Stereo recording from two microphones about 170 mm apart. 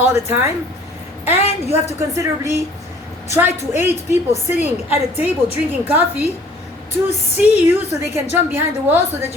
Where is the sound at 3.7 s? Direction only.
15° right (ahead or behind).